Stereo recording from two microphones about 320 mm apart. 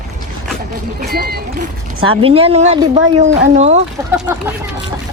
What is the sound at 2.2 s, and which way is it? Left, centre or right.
Speech, centre.